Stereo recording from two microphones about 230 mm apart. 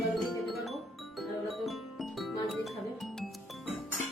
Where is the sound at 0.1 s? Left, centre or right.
Centre.